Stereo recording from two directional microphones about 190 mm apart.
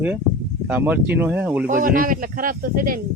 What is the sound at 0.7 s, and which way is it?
Speech, 10° right (ahead or behind).